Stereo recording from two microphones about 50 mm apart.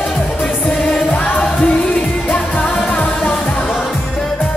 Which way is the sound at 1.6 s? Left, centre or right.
Left.